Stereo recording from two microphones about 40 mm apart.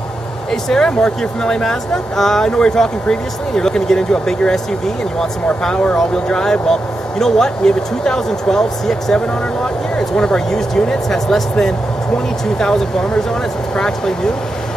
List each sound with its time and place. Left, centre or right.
0.5 s speech: centre
2.5 s speech: centre